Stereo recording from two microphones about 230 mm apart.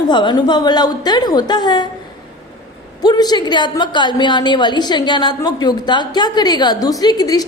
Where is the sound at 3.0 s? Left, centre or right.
Centre.